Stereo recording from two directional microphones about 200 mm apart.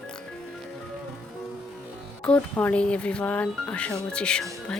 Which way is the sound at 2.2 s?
5° left (ahead or behind).